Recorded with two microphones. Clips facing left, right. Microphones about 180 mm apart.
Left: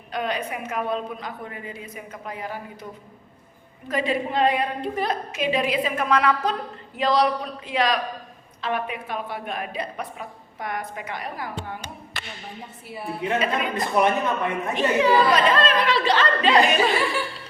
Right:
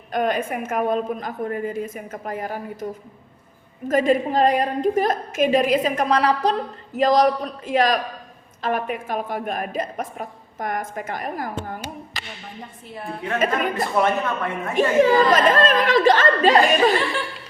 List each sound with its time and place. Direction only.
0.1 s a woman's voice: 45° right (ahead or behind)
12.9 s a woman's voice: 5° left (ahead or behind)
13.4 s a woman's voice: 45° right (ahead or behind)
13.7 s speech: 20° left (ahead or behind)
14.8 s a woman's voice: 45° right (ahead or behind)